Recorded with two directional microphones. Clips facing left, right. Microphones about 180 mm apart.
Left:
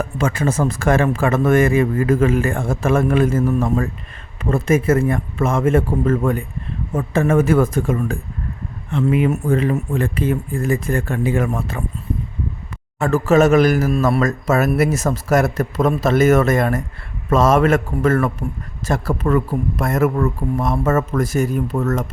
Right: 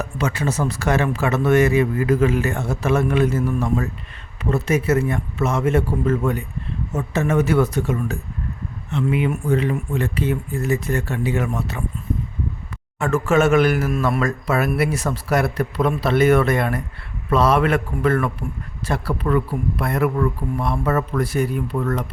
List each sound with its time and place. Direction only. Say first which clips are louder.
0.0 s a man's voice: left 3 dB; 50° left (ahead or behind)
13.0 s a man's voice: left 3 dB; 35° left (ahead or behind)